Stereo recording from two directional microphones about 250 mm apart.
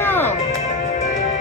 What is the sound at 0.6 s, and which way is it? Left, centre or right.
Music, left.